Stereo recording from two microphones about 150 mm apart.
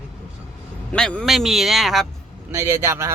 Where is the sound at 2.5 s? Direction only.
15° right (ahead or behind).